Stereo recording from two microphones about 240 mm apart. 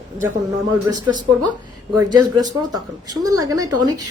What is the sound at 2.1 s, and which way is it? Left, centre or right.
Speech, centre.